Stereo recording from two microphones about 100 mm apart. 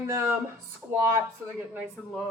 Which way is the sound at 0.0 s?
25° right (ahead or behind).